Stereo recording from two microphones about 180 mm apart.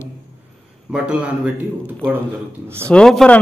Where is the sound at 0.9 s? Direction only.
5° right (ahead or behind).